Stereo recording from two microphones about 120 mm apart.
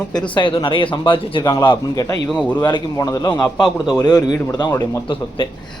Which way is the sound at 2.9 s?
25° left (ahead or behind).